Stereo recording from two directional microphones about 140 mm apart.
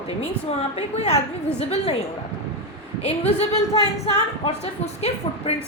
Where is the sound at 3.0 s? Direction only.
45° left (ahead or behind).